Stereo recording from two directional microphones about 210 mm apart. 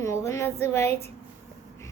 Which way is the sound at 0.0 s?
15° left (ahead or behind).